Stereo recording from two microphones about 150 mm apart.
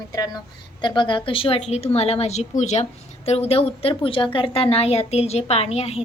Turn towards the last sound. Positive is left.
turn(degrees=45)  # may be behind; listen again after turning